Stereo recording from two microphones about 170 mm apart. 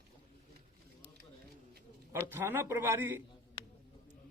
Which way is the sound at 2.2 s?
15° right (ahead or behind).